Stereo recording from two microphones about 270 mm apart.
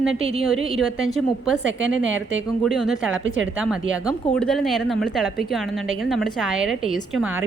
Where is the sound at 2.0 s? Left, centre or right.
Right.